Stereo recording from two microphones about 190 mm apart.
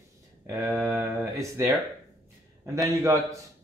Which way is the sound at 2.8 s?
15° right (ahead or behind).